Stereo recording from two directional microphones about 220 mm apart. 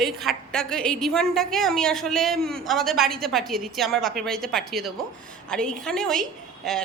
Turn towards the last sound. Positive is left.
turn(degrees=0)  # may be behind; listen again after turning